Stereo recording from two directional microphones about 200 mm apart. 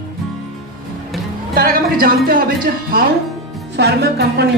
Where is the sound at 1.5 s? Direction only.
45° right (ahead or behind).